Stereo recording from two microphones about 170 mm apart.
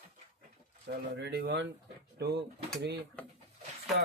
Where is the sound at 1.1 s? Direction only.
80° right.